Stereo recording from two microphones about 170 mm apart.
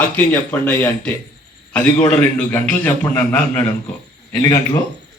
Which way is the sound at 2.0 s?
5° left (ahead or behind).